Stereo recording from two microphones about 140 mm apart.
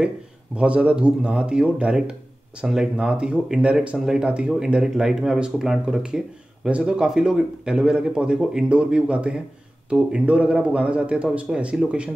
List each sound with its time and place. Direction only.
0.6 s speech: 10° right (ahead or behind)